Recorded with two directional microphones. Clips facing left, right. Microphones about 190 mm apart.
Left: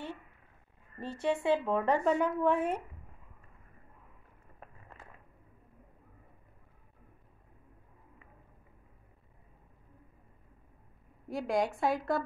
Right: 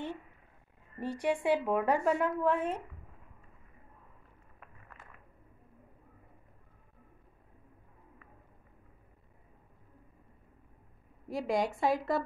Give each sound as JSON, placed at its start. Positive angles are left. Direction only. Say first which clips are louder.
{"t": 0.9, "sound": "a woman's voice", "louder": "even", "side_deg": -15}
{"t": 4.6, "sound": "a sound", "louder": "left 3 dB", "side_deg": 30}
{"t": 11.2, "sound": "a woman's voice", "louder": "even", "side_deg": 0}